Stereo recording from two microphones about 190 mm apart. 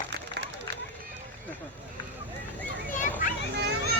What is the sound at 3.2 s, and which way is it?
Children playing, 45° left (ahead or behind).